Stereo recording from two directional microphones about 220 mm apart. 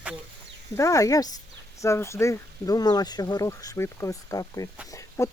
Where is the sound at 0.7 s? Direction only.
15° left (ahead or behind).